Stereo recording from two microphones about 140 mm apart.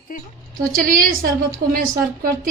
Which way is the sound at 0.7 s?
85° right.